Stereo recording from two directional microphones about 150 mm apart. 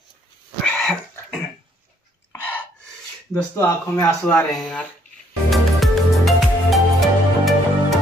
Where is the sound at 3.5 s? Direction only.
15° left (ahead or behind).